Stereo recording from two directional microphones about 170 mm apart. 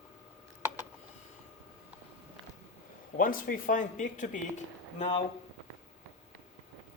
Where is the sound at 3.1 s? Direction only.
55° left (ahead or behind); by 5.2 s 35° left (ahead or behind).